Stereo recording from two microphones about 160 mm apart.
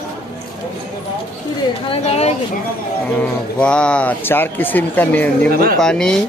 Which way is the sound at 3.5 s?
5° left (ahead or behind).